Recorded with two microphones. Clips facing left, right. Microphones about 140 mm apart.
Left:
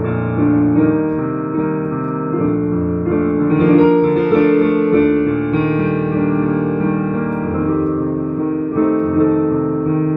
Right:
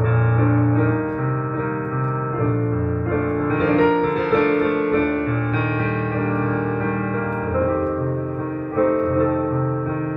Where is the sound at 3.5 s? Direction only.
40° left (ahead or behind).